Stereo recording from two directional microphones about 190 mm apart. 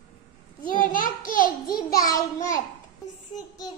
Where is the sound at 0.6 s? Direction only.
45° left (ahead or behind).